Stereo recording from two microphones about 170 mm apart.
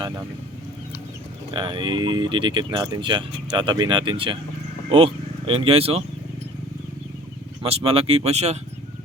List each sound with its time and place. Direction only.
1.5 s speech: 30° right (ahead or behind)
7.6 s speech: 35° right (ahead or behind)